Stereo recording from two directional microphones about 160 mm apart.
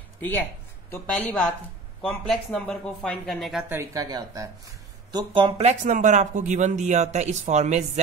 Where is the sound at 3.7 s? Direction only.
20° right (ahead or behind).